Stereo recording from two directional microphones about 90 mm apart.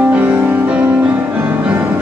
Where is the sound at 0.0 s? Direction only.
20° right (ahead or behind).